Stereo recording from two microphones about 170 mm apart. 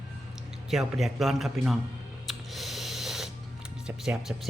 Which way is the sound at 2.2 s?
Centre (ahead or behind).